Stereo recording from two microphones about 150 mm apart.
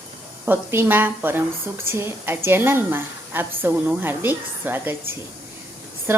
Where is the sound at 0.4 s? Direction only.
15° right (ahead or behind).